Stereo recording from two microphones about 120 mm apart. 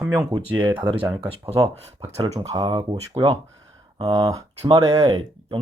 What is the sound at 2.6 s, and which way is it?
Speech, 40° right (ahead or behind).